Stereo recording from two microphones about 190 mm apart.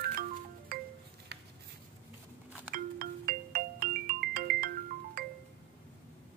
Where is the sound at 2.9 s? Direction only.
50° right (ahead or behind).